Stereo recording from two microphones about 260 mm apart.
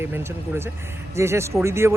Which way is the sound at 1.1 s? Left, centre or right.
Centre.